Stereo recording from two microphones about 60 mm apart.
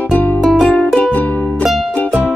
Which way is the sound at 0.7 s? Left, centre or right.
Left.